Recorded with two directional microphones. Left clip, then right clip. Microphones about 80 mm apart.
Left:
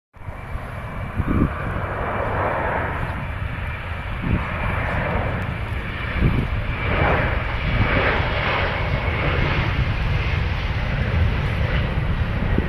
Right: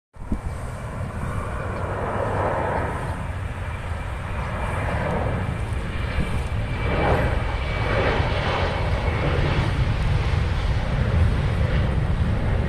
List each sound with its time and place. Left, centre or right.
1.9 s vehicle: right
4.6 s vehicle: right
6.8 s vehicle: right